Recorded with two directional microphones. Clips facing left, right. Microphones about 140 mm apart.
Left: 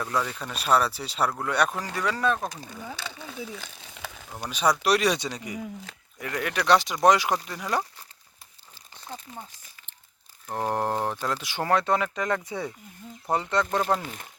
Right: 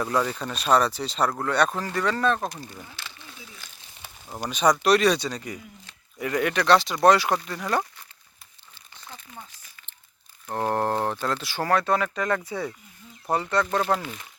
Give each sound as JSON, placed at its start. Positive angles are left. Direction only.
{"t": 0.0, "sound": "speech", "side_deg": -10}
{"t": 3.9, "sound": "frying", "side_deg": 90}
{"t": 4.4, "sound": "speech", "side_deg": 5}
{"t": 6.1, "sound": "speech", "side_deg": -5}
{"t": 9.0, "sound": "crumpling", "side_deg": 30}
{"t": 10.5, "sound": "speech", "side_deg": 10}
{"t": 14.0, "sound": "speech", "side_deg": 40}